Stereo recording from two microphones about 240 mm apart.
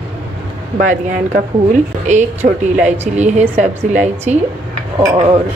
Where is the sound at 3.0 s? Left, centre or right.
Right.